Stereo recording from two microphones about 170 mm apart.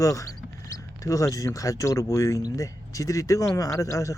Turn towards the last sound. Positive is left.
turn(degrees=20)  # may be behind; listen again after turning